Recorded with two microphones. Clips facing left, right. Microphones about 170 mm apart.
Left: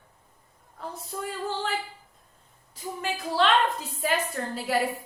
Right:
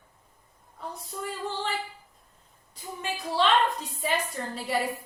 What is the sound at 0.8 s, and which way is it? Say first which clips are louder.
Speech: left 2 dB; centre (ahead or behind).